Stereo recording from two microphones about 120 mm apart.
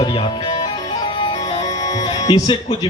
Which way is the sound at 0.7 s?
40° left (ahead or behind).